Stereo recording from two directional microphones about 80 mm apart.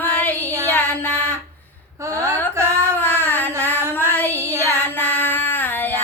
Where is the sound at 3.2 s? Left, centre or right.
Left.